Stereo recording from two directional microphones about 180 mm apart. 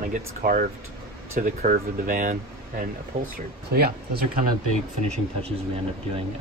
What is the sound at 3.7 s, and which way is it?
Speech, 60° right (ahead or behind).